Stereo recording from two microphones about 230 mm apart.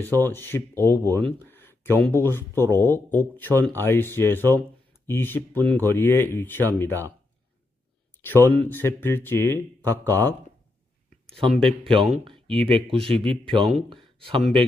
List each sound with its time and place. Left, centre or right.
0.2 s speech: centre
0.9 s speech: centre
1.1 s speech: centre
8.2 s speech: centre
11.4 s speech: centre
11.8 s speech: right